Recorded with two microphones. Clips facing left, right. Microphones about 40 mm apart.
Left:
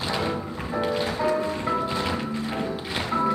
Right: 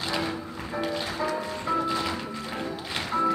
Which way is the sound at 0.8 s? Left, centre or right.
Centre.